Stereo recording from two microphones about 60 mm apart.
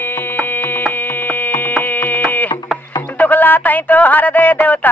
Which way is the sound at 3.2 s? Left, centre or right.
Left.